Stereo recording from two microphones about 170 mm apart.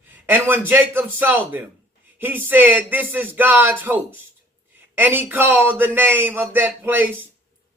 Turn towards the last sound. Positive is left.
turn(degrees=-10)  # may be behind; listen again after turning